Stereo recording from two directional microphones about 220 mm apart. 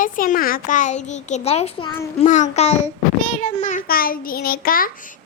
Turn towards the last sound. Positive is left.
turn(degrees=40)  # may be behind; listen again after turning